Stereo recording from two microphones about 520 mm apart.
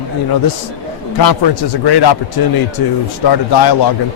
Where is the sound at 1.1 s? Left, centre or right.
Left.